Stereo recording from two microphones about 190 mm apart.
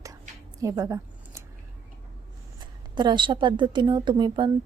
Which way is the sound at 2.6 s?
20° right (ahead or behind).